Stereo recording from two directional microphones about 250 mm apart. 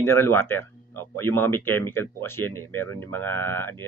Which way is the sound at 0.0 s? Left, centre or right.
Centre.